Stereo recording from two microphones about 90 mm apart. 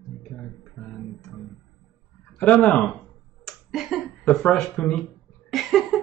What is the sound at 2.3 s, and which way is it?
Speech, 15° left (ahead or behind).